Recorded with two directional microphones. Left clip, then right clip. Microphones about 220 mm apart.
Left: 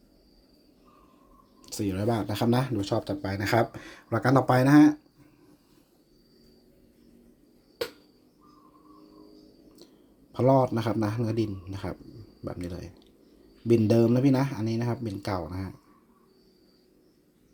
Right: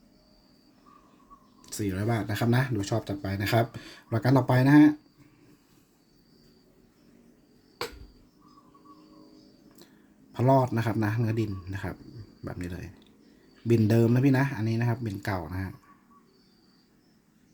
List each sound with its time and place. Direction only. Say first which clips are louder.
1.6 s speech: left 2 dB; 10° left (ahead or behind)
3.2 s speech: left 2 dB; 15° right (ahead or behind)
10.3 s speech: left 1 dB; centre (ahead or behind)